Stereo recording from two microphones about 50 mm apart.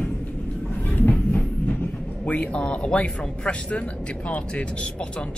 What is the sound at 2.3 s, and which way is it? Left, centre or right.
Speech, left.